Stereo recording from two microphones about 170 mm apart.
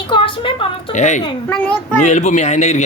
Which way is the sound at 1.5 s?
10° left (ahead or behind).